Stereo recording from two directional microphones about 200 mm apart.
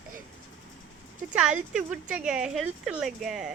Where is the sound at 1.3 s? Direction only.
5° right (ahead or behind).